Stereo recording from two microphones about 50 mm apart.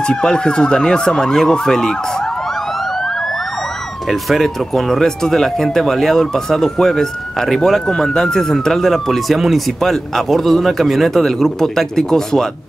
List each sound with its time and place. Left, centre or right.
0.1 s police car: centre
4.1 s speech: centre